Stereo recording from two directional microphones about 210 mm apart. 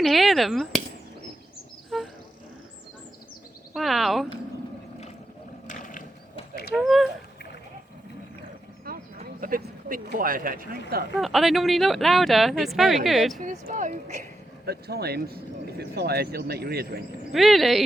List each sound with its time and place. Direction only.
0.0 s speech: centre (ahead or behind)
1.9 s a sound: centre (ahead or behind)
3.8 s speech: centre (ahead or behind)
5.6 s mechanisms: 40° left (ahead or behind)
6.7 s speech: centre (ahead or behind)
8.9 s a sound: 45° right (ahead or behind)
9.2 s a man's voice: 40° right (ahead or behind)
11.2 s speech: centre (ahead or behind)
13.4 s speech: 35° right (ahead or behind)
14.7 s speech: 50° right (ahead or behind)
17.3 s speech: centre (ahead or behind)